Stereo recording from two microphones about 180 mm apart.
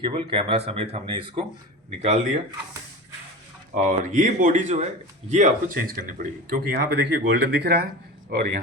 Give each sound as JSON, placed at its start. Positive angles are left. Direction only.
{"t": 0.0, "sound": "speech", "side_deg": -25}
{"t": 3.8, "sound": "a man's voice", "side_deg": -45}